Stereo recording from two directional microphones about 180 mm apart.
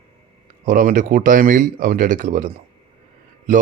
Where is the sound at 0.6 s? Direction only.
45° right (ahead or behind).